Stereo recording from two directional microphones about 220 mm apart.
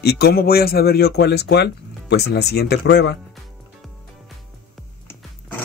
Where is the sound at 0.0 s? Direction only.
45° left (ahead or behind).